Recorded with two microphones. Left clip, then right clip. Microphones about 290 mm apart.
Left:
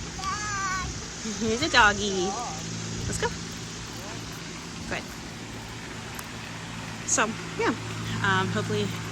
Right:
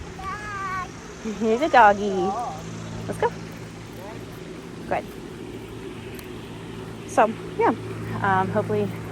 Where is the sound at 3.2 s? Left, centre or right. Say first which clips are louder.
Right 6 dB; centre.